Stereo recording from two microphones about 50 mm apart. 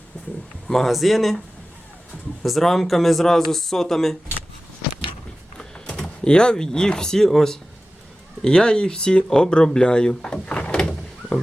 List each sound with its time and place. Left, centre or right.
0.7 s speech: centre
2.4 s speech: centre
5.5 s a sound: left
6.0 s speech: centre